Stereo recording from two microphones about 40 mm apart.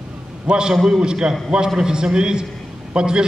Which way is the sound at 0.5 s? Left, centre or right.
Right.